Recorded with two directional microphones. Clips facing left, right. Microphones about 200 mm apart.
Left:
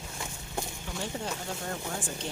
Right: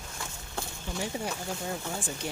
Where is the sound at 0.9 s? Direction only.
10° right (ahead or behind).